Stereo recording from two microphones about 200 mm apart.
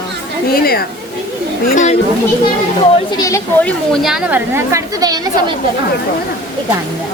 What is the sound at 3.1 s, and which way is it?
Speech, 15° left (ahead or behind).